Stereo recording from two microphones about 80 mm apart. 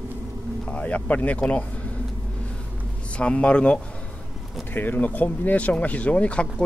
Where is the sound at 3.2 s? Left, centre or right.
Centre.